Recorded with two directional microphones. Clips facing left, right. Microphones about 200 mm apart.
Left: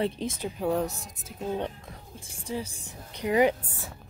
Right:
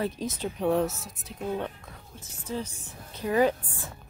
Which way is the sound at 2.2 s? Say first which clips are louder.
Even; 10° left (ahead or behind).